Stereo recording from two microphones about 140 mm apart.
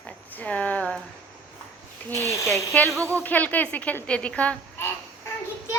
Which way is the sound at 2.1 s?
20° left (ahead or behind).